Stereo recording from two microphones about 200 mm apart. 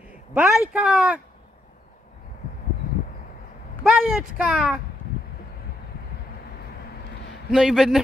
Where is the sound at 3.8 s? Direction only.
5° right (ahead or behind).